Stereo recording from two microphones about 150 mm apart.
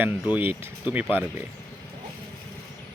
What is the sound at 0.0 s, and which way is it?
Speech, 10° right (ahead or behind).